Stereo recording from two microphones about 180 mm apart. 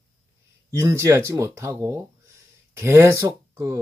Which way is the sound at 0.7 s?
15° right (ahead or behind).